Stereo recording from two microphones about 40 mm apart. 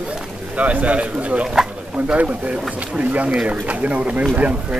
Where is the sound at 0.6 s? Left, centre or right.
Right.